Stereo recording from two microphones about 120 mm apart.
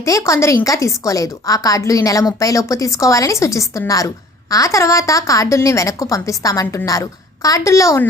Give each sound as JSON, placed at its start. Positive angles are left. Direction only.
{"t": 0.0, "sound": "a woman's voice", "side_deg": 25}